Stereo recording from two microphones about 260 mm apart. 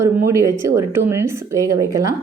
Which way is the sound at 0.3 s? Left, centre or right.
Centre.